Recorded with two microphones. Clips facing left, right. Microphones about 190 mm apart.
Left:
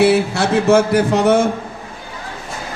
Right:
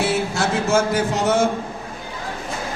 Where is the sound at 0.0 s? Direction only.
65° left (ahead or behind).